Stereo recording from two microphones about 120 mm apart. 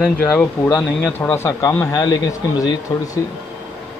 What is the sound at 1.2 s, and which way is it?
Speech, 20° left (ahead or behind).